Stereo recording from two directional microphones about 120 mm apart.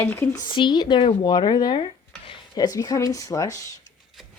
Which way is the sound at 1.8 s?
45° left (ahead or behind).